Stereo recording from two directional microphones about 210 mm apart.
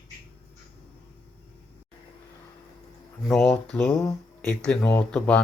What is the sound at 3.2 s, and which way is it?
Speech, centre (ahead or behind).